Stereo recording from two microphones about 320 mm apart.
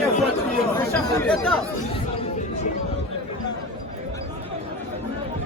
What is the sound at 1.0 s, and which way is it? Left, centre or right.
Speech, centre.